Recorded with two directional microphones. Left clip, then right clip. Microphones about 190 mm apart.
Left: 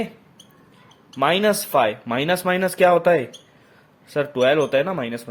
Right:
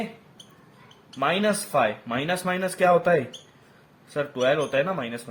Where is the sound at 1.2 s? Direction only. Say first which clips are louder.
Left 5 dB; 40° left (ahead or behind).